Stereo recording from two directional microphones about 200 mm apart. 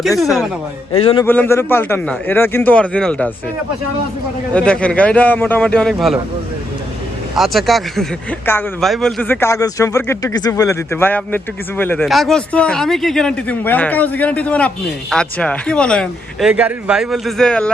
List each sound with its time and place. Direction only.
0.9 s a man's voice: 30° left (ahead or behind)
1.2 s speech: 10° left (ahead or behind)
4.5 s speech: 5° left (ahead or behind)
7.3 s speech: centre (ahead or behind)